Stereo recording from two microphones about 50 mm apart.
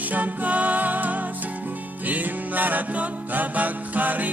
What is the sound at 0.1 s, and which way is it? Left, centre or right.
Music, right.